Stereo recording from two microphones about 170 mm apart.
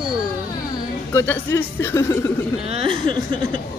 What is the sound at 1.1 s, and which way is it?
Speech, 15° left (ahead or behind).